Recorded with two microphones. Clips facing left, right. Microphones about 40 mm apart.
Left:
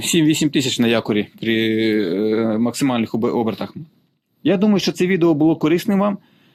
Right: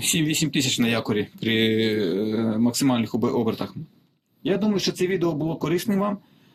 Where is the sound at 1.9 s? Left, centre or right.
Centre.